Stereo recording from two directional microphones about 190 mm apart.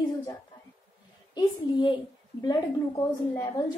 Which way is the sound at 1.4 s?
25° left (ahead or behind).